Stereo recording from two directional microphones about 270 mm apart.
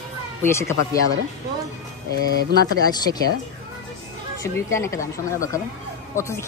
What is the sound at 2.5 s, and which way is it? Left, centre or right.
Speech, right.